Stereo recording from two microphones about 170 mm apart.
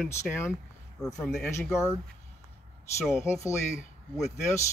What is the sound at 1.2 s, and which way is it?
Speech, 5° left (ahead or behind).